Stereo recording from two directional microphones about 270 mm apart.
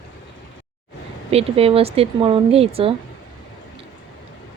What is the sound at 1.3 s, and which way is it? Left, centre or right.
Speech, right.